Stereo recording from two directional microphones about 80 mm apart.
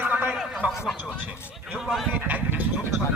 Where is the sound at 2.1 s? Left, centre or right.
Centre.